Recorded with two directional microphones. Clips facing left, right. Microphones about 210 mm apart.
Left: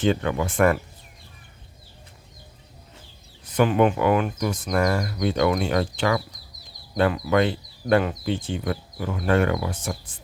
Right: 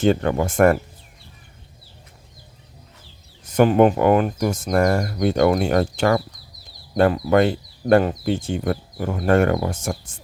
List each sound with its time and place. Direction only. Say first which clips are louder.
0.0 s speech: right 4 dB; 45° right (ahead or behind)
3.4 s speech: right 5 dB; 45° right (ahead or behind)